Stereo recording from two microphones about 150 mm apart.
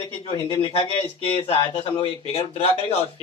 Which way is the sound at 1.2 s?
40° left (ahead or behind).